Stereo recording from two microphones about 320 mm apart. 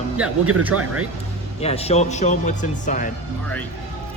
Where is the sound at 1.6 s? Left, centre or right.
Centre.